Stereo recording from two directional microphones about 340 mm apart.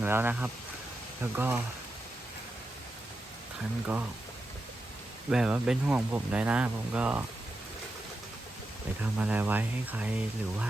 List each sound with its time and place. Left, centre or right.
0.0 s speech: centre
5.3 s speech: centre
9.1 s speech: centre